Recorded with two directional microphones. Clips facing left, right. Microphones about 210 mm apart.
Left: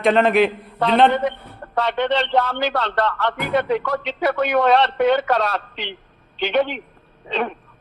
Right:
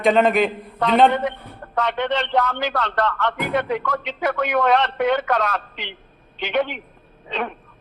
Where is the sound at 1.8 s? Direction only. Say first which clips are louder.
Left 2 dB; 30° left (ahead or behind).